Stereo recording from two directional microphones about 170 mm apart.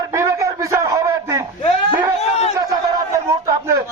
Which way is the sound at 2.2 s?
40° left (ahead or behind).